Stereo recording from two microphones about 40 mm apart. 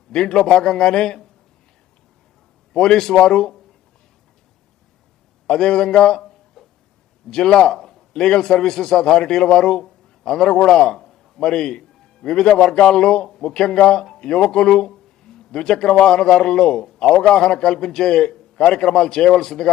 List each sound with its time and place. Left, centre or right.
0.1 s speech: centre
2.7 s speech: centre
5.5 s a sound: centre
7.3 s a man's voice: centre
10.9 s a sound: centre
11.3 s a man's voice: centre